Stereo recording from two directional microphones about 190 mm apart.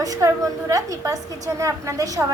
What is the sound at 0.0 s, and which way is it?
A woman's voice, 20° right (ahead or behind).